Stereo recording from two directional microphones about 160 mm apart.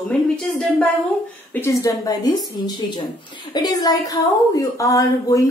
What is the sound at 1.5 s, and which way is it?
A woman's voice, 15° left (ahead or behind).